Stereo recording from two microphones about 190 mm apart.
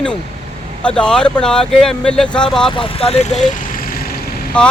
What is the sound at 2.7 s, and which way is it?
Speech, 30° left (ahead or behind).